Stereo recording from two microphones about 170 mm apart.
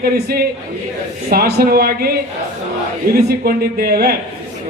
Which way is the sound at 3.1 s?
60° right (ahead or behind).